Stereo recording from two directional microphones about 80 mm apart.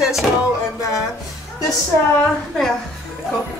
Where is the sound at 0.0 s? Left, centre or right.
Centre.